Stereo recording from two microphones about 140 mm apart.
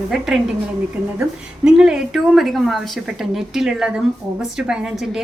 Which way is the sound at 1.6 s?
5° right (ahead or behind).